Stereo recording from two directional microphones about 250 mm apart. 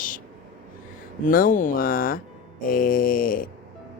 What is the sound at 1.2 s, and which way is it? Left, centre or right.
Speech, left.